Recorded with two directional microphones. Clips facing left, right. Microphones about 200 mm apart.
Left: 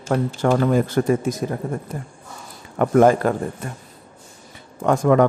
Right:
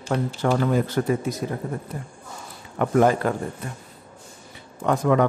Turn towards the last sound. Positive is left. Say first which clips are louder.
# left 4 dB
turn(degrees=50)  # may be behind; listen again after turning